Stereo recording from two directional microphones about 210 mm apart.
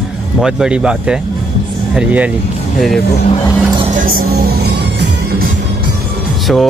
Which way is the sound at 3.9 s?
40° right (ahead or behind).